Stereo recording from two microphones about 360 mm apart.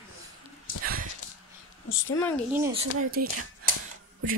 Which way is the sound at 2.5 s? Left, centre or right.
Centre.